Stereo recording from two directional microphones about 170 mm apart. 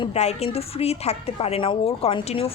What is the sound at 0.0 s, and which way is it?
Speech, 40° left (ahead or behind).